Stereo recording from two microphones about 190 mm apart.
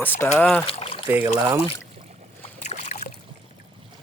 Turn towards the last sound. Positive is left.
turn(degrees=40)  # may be behind; listen again after turning